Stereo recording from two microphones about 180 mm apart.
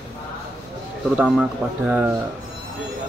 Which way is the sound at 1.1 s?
5° right (ahead or behind).